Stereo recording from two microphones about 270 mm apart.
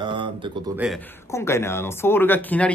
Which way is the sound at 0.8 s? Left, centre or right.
Centre.